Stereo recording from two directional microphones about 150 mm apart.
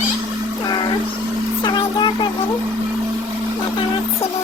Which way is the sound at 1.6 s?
30° left (ahead or behind).